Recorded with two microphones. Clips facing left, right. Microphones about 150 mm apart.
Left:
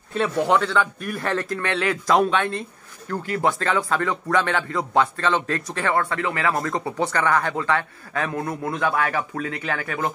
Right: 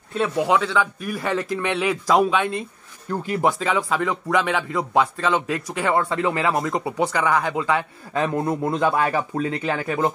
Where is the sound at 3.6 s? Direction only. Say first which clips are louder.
Even; 5° right (ahead or behind).